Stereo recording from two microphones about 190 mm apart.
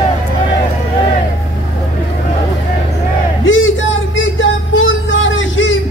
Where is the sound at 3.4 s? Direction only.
85° left.